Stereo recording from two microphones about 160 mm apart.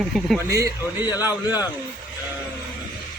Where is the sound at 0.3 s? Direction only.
20° right (ahead or behind).